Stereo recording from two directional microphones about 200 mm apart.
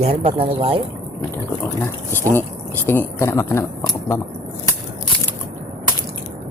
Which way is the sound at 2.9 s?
10° left (ahead or behind).